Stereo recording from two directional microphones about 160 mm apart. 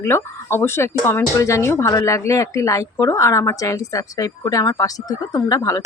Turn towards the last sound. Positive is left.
turn(degrees=20)  # may be behind; listen again after turning